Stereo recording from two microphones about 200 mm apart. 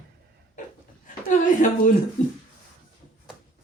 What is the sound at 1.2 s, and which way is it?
Speech, 40° left (ahead or behind).